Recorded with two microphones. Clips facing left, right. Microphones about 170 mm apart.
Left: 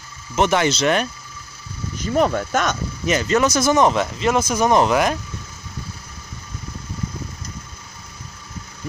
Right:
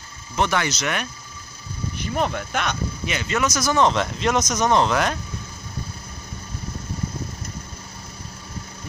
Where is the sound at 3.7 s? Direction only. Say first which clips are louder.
Left 1 dB; 10° left (ahead or behind).